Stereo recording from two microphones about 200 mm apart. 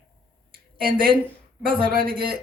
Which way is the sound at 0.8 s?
50° right (ahead or behind).